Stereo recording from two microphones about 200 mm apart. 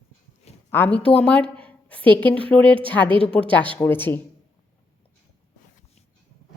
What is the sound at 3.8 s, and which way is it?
Speech, 10° left (ahead or behind).